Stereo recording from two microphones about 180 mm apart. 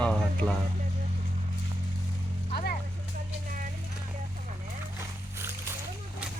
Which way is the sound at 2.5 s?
60° left (ahead or behind).